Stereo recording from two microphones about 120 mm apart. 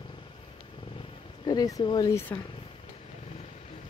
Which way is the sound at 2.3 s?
20° left (ahead or behind).